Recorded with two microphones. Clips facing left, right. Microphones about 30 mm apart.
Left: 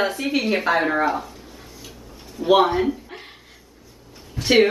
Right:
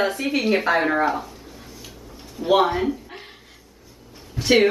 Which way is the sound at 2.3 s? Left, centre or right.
Centre.